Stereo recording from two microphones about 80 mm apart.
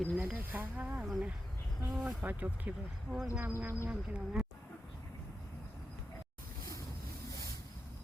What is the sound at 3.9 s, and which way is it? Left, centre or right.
Speech, centre.